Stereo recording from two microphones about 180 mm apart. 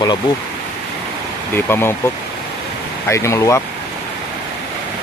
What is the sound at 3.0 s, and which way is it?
Speech, 15° left (ahead or behind).